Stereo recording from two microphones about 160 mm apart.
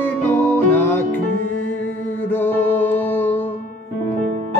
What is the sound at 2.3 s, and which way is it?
Music, 15° left (ahead or behind).